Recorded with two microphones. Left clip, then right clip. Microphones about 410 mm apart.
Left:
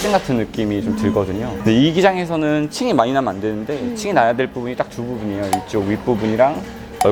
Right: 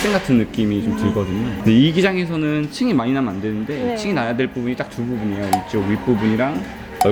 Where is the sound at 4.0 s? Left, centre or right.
Left.